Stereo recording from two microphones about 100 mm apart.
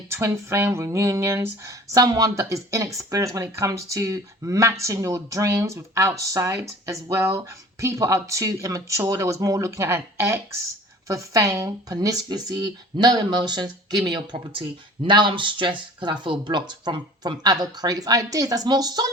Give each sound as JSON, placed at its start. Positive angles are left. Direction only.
{"t": 0.1, "sound": "speech", "side_deg": -25}